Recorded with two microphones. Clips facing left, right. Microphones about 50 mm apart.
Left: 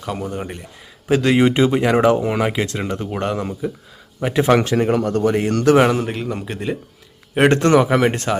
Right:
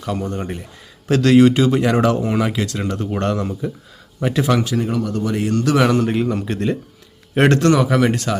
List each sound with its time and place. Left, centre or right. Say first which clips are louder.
0.0 s speech: right 2 dB; centre
4.4 s speech: left 3 dB; left
5.2 s speech: left 4 dB; left
5.5 s speech: left 2 dB; left
5.9 s speech: right 4 dB; centre
7.5 s speech: left 1 dB; left